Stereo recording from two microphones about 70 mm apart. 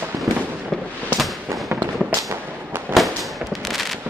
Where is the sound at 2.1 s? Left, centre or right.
Right.